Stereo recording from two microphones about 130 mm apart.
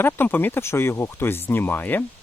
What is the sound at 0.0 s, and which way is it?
Speech, 15° left (ahead or behind).